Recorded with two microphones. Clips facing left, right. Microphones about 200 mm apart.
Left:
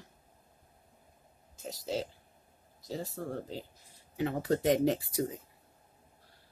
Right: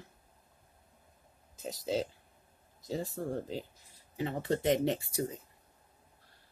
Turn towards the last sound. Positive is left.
turn(degrees=0)  # may be behind; listen again after turning